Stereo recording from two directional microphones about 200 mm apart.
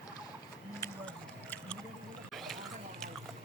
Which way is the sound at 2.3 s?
Centre (ahead or behind).